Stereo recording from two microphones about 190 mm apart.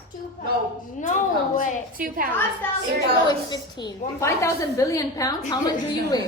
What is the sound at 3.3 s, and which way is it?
A woman's voice, 20° left (ahead or behind).